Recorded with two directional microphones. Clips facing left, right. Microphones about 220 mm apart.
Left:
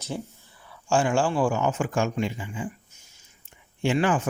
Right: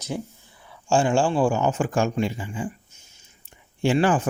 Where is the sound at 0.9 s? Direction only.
25° right (ahead or behind).